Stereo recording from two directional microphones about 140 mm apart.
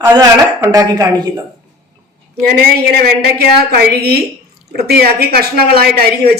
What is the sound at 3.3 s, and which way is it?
Speech, 90° right.